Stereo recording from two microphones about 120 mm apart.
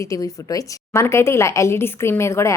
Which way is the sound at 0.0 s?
25° left (ahead or behind).